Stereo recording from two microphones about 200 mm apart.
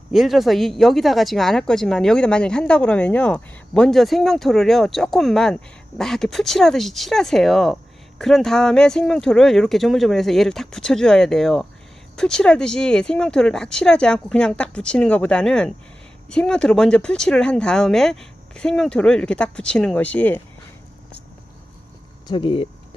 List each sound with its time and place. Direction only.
0.1 s speech: centre (ahead or behind)
22.3 s speech: 25° left (ahead or behind)